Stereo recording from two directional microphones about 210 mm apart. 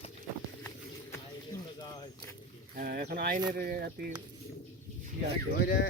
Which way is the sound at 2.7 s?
45° right (ahead or behind).